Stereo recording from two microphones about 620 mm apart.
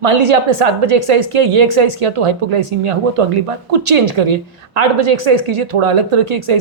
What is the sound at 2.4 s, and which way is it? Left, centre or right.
Speech, right.